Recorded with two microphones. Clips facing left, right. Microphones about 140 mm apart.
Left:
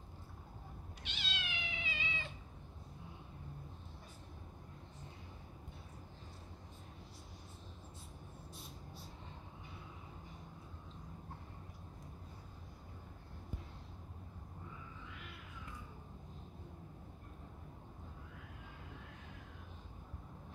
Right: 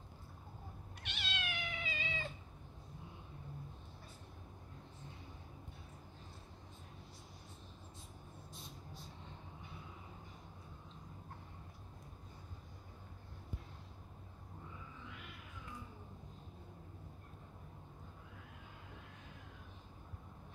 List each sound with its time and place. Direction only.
1.0 s cat: 55° right (ahead or behind)